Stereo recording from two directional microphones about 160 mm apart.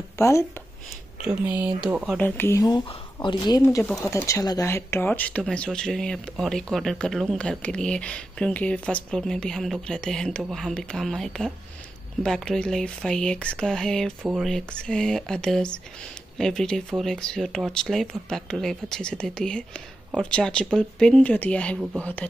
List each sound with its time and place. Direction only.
0.2 s speech: 15° left (ahead or behind)
1.2 s speech: 10° right (ahead or behind)
2.1 s speech: 15° left (ahead or behind)
3.6 s speech: 15° left (ahead or behind)